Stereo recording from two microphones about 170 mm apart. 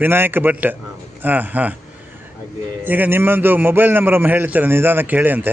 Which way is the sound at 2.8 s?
10° right (ahead or behind).